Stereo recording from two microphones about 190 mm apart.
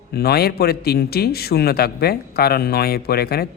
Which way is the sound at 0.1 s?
55° left (ahead or behind).